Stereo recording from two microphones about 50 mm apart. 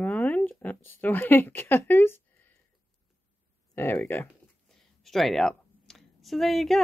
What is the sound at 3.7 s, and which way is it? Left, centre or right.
Speech, left.